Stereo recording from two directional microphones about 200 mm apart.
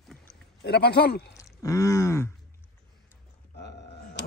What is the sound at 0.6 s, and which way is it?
Speech, 55° left (ahead or behind).